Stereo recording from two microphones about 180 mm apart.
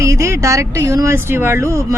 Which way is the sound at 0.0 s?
15° right (ahead or behind).